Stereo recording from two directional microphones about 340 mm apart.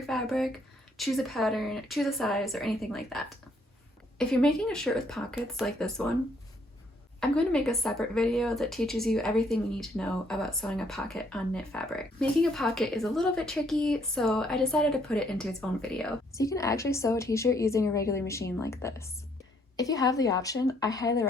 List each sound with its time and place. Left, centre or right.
0.0 s a sound: centre
0.9 s speech: centre
7.2 s a woman's voice: centre